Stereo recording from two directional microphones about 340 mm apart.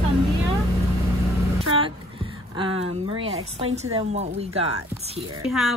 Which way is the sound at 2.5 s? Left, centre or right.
Centre.